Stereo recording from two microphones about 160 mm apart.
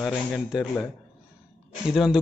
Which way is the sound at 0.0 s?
Centre (ahead or behind).